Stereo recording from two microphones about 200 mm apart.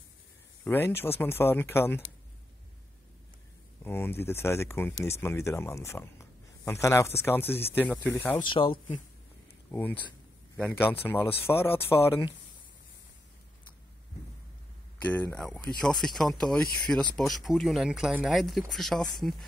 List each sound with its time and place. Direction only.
0.7 s speech: 10° left (ahead or behind)
3.8 s speech: 10° left (ahead or behind)
8.5 s speech: 25° left (ahead or behind)
9.7 s speech: 10° left (ahead or behind)
15.0 s speech: 10° left (ahead or behind)